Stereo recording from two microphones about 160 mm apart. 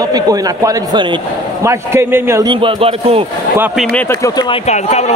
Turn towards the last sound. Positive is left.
turn(degrees=45)  # may be behind; listen again after turning